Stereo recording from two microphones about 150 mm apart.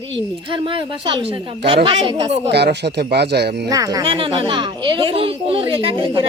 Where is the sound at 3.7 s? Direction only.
25° right (ahead or behind).